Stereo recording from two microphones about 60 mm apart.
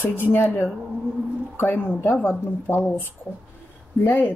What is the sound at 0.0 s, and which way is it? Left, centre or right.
Speech, left.